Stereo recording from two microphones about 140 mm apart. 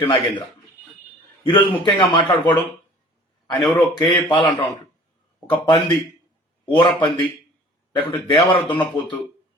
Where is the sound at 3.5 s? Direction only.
30° left (ahead or behind).